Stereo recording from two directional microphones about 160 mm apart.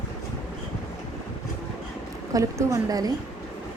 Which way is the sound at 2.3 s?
20° right (ahead or behind).